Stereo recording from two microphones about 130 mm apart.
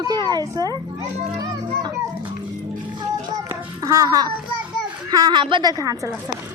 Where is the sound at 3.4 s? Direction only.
25° right (ahead or behind).